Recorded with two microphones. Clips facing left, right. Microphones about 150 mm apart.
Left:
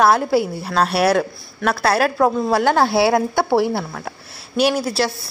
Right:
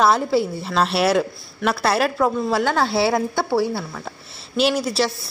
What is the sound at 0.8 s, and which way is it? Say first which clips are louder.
Speech: left 2 dB; 55° left (ahead or behind).